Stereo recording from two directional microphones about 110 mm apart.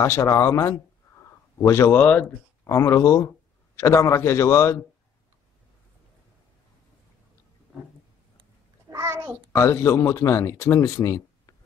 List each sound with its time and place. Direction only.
0.0 s speech: 25° left (ahead or behind)
2.6 s speech: 25° left (ahead or behind)
8.9 s a sound: 25° right (ahead or behind)
9.5 s speech: 25° left (ahead or behind)